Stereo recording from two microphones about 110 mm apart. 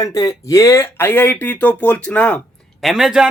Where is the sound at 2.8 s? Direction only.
Centre (ahead or behind).